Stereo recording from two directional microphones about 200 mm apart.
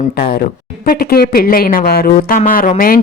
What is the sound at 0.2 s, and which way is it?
Speech, 45° left (ahead or behind).